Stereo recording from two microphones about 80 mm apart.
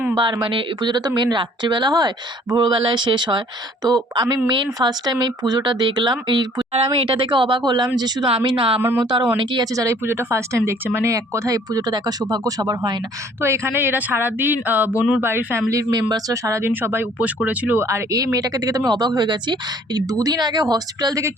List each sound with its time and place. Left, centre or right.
0.2 s speech: right
3.8 s speech: right
4.4 s speech: right
7.9 s speech: right
9.7 s speech: right
13.4 s speech: right
15.7 s speech: right
16.0 s speech: right; by 17.7 s centre
17.7 s speech: right
18.9 s speech: right
20.0 s speech: right